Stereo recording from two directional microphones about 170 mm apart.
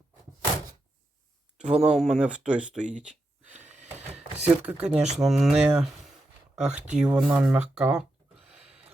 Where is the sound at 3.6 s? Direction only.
45° right (ahead or behind).